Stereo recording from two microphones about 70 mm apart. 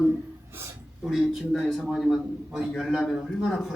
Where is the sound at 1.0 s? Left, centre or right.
Centre.